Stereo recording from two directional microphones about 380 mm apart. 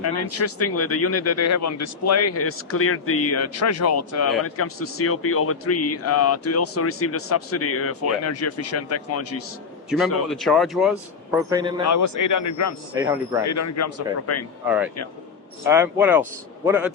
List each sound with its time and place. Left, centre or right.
0.0 s a man's voice: left
10.2 s a man's voice: centre
11.9 s speech: left
13.0 s speech: centre
13.4 s speech: left
15.6 s a man's voice: centre